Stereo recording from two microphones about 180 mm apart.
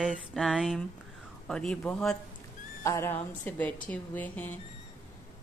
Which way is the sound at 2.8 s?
15° left (ahead or behind).